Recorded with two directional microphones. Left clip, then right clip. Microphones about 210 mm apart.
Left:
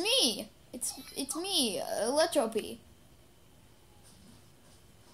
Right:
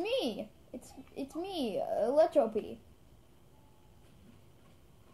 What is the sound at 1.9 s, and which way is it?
Speech, 15° right (ahead or behind).